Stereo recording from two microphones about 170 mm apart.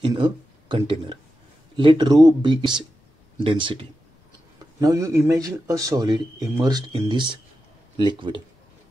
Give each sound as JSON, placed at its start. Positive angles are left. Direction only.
{"t": 0.0, "sound": "speech", "side_deg": -30}